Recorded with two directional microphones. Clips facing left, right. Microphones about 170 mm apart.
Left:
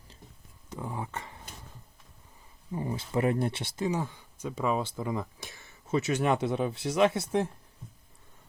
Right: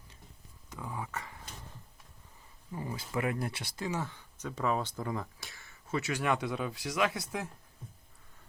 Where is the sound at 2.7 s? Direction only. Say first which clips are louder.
Left 5 dB; 25° left (ahead or behind).